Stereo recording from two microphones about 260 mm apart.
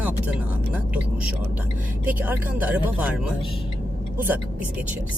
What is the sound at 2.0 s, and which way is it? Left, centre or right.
Speech, centre.